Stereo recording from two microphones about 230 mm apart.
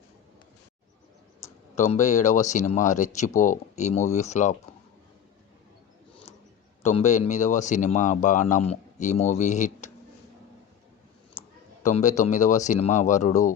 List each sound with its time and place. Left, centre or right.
1.7 s speech: left
6.8 s a man's voice: left
11.8 s speech: left